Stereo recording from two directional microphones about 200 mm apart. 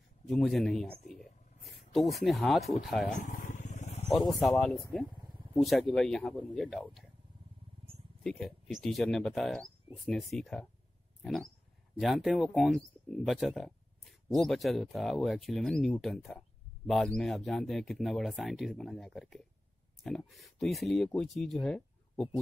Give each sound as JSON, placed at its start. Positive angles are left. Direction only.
{"t": 0.3, "sound": "speech", "side_deg": 0}
{"t": 3.2, "sound": "vehicle", "side_deg": 40}
{"t": 4.3, "sound": "speech", "side_deg": 0}
{"t": 8.2, "sound": "speech", "side_deg": 0}